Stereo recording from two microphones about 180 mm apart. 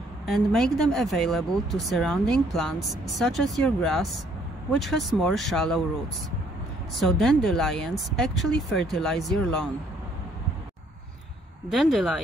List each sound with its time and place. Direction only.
0.3 s speech: centre (ahead or behind)
7.0 s speech: centre (ahead or behind)
11.7 s speech: centre (ahead or behind)